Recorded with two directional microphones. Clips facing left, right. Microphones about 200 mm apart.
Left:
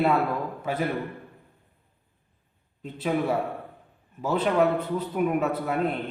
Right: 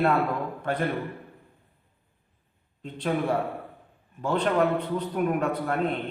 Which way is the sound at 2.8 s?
5° left (ahead or behind).